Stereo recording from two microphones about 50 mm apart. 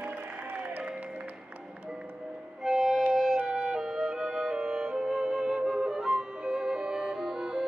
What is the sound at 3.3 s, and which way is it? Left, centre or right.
Music, centre.